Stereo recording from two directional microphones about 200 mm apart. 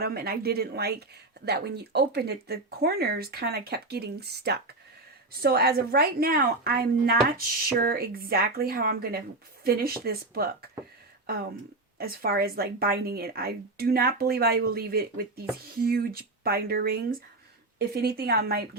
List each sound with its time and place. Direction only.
0.0 s a woman's voice: 50° right (ahead or behind)